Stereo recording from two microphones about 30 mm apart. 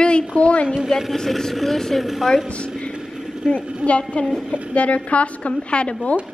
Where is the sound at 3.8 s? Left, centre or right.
Left.